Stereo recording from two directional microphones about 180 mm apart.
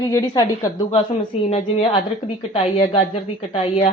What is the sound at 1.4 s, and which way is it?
A woman's voice, 30° left (ahead or behind).